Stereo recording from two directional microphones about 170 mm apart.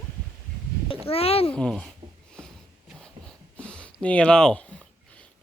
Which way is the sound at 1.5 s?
5° left (ahead or behind).